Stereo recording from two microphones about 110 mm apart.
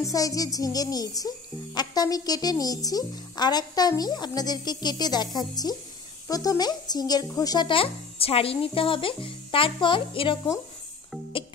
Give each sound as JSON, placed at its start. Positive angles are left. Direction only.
{"t": 0.0, "sound": "speech", "side_deg": 30}
{"t": 7.6, "sound": "speech", "side_deg": 55}